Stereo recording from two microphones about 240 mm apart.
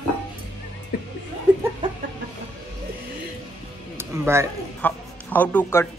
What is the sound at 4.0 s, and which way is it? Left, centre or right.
Speech, centre.